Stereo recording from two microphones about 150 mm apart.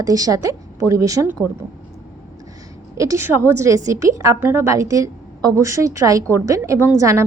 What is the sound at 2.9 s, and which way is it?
A woman's voice, 20° right (ahead or behind).